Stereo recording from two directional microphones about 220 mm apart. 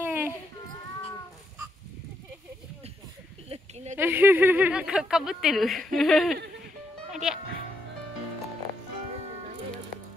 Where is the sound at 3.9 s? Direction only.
10° right (ahead or behind).